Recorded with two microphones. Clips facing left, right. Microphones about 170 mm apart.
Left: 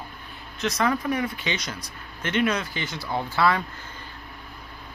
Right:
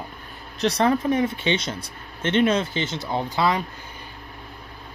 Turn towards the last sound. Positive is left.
turn(degrees=-20)  # may be behind; listen again after turning